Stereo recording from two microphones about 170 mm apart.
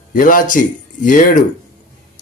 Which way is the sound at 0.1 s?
55° left (ahead or behind).